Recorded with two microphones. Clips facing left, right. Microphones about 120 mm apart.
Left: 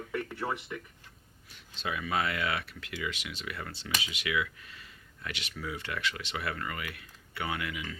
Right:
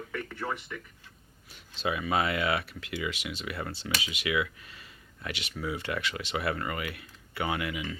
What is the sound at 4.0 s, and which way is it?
Speech, 15° right (ahead or behind).